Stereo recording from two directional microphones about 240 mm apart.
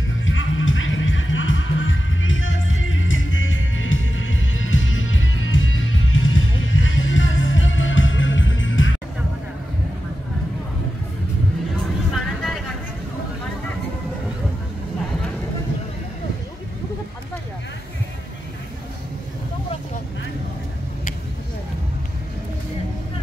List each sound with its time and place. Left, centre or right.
0.2 s music: left